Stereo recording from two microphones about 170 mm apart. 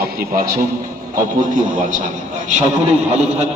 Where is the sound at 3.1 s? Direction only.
40° right (ahead or behind).